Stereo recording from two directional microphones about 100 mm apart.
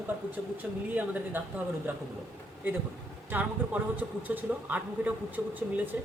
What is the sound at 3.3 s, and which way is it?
Speech, 20° right (ahead or behind).